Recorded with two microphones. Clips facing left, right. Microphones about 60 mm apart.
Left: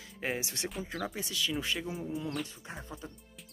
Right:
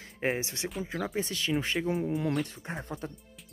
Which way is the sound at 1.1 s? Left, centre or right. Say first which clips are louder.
Right 7 dB; right.